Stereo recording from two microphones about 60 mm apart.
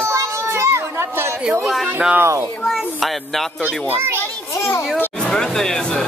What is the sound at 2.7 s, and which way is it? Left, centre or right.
Speech, centre.